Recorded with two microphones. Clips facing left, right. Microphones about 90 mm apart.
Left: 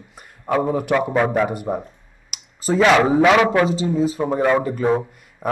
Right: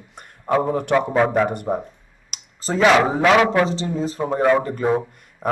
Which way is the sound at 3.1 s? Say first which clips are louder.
Left 1 dB; centre (ahead or behind).